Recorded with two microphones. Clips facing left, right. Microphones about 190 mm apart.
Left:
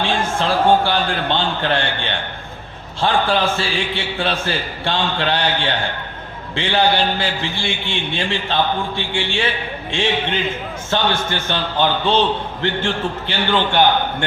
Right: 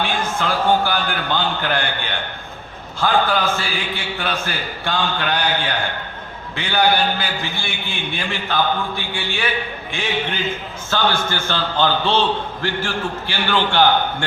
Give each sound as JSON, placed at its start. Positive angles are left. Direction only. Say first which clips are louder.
{"t": 0.0, "sound": "a man's voice", "louder": "left 2 dB", "side_deg": 30}